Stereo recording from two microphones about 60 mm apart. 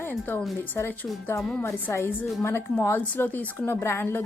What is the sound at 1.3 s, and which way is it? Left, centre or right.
Speech, left.